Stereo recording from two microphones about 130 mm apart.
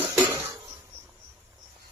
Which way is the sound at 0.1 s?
25° right (ahead or behind).